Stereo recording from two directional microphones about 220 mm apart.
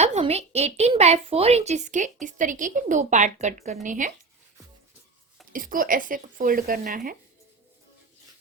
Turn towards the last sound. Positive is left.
turn(degrees=-40)  # may be behind; listen again after turning